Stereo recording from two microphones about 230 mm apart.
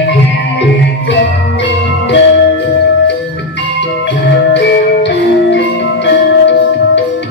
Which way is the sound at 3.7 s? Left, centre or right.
Left.